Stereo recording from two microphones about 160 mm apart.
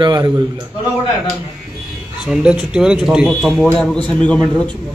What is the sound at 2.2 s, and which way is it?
Speech, 5° right (ahead or behind).